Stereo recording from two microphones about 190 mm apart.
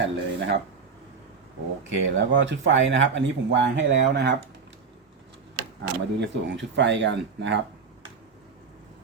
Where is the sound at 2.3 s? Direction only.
80° right.